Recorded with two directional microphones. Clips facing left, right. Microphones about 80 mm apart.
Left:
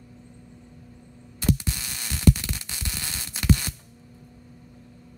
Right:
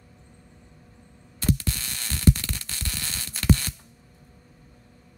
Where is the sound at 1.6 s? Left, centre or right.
Centre.